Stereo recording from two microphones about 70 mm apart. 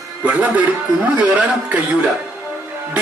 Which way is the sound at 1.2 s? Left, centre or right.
Centre.